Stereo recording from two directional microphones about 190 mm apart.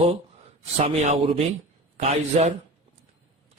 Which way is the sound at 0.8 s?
35° right (ahead or behind).